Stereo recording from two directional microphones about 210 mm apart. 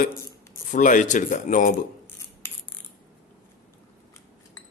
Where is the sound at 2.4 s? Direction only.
10° left (ahead or behind).